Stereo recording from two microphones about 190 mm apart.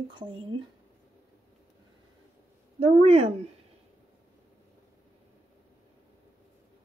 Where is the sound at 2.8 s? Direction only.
35° right (ahead or behind).